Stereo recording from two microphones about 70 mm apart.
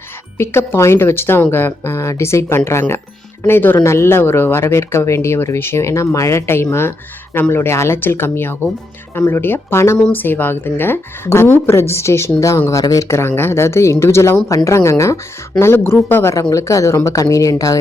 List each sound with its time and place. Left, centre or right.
0.3 s speech: left
3.4 s speech: left
10.1 s speech: left
16.3 s speech: left